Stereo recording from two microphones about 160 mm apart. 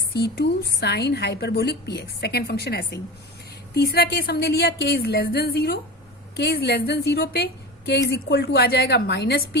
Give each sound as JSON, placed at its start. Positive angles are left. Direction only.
{"t": 0.1, "sound": "a woman's voice", "side_deg": 90}